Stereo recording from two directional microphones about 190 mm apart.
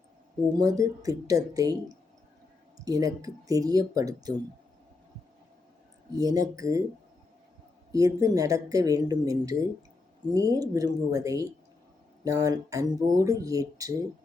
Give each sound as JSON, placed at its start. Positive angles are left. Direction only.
{"t": 0.5, "sound": "speech", "side_deg": -20}
{"t": 2.8, "sound": "speech", "side_deg": -20}
{"t": 6.1, "sound": "speech", "side_deg": -20}
{"t": 7.9, "sound": "speech", "side_deg": -20}